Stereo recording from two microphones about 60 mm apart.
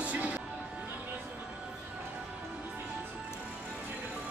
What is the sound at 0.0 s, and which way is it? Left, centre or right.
Music, right.